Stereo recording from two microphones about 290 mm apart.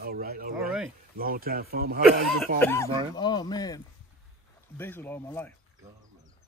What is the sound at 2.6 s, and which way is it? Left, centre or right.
Speech, centre.